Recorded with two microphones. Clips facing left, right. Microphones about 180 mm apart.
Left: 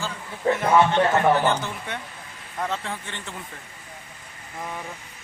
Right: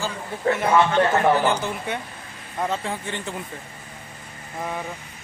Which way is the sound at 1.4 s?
10° right (ahead or behind).